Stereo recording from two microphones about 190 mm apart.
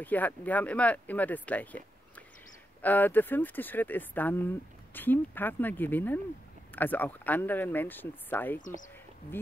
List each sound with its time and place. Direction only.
0.0 s speech: 10° left (ahead or behind)
8.5 s speech: 45° left (ahead or behind)